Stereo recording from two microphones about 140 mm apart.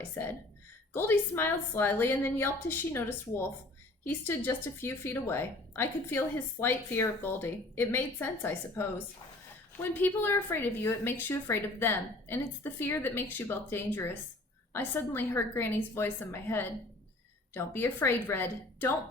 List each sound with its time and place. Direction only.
0.2 s speech: 15° left (ahead or behind)